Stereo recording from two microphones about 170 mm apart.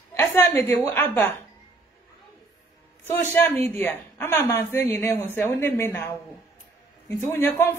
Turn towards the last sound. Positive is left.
turn(degrees=15)  # may be behind; listen again after turning